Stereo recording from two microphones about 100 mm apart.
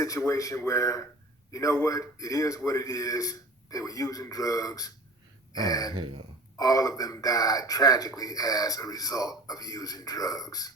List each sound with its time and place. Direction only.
0.0 s speech: 35° left (ahead or behind)
6.0 s speech: 60° right (ahead or behind)
6.6 s speech: 40° left (ahead or behind)